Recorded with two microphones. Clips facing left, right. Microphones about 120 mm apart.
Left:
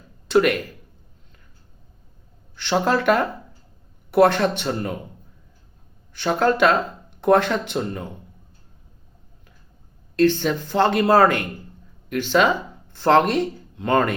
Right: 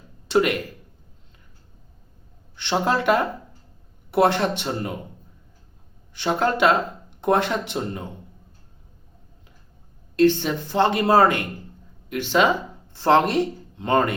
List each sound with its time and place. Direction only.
0.3 s speech: 20° right (ahead or behind)
2.6 s speech: 20° right (ahead or behind)
6.1 s speech: 20° right (ahead or behind)
10.2 s speech: 20° right (ahead or behind)